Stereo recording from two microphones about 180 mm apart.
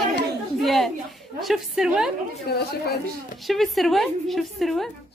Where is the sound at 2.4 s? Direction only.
65° left (ahead or behind).